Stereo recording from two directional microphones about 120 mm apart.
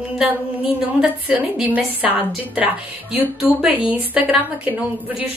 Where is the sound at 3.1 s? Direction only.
15° right (ahead or behind).